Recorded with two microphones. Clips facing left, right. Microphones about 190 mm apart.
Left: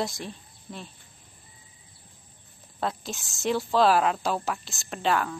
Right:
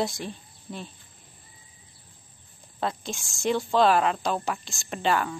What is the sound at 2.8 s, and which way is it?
A woman's voice, centre (ahead or behind).